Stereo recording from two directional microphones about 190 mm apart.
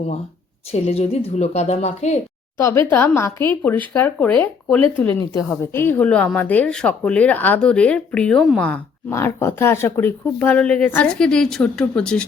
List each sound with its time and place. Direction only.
0.7 s a woman's voice: 35° left (ahead or behind)
2.6 s speech: 15° left (ahead or behind)